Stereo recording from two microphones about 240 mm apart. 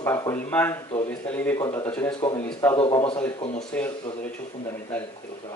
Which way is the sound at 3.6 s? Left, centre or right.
Centre.